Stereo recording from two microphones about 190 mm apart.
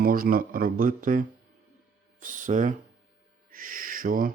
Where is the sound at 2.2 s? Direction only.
45° right (ahead or behind).